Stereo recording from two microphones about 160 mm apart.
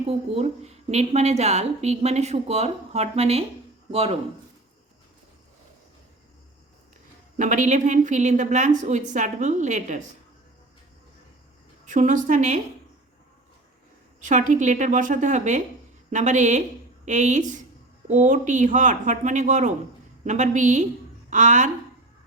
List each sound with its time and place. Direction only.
0.1 s a woman's voice: 40° right (ahead or behind)
7.3 s a woman's voice: 50° right (ahead or behind)
11.9 s a woman's voice: 50° right (ahead or behind)
14.2 s a woman's voice: 50° right (ahead or behind)